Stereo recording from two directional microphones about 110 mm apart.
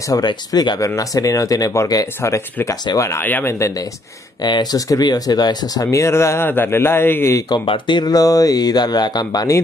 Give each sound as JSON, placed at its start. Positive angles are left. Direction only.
{"t": 0.1, "sound": "speech", "side_deg": 40}
{"t": 4.4, "sound": "speech", "side_deg": 40}
{"t": 7.4, "sound": "speech", "side_deg": 45}